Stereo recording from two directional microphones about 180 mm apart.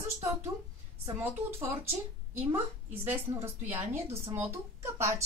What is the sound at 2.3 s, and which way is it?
A woman's voice, 10° right (ahead or behind).